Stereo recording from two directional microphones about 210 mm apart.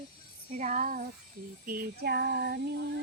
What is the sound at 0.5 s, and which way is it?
Speech, 35° right (ahead or behind).